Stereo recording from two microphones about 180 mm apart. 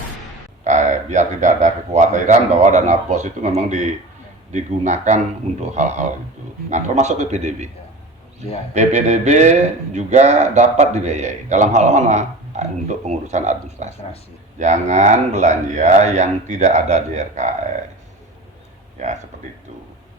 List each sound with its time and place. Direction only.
0.6 s speech: 40° right (ahead or behind)
8.7 s speech: 40° right (ahead or behind)
19.0 s speech: 45° right (ahead or behind)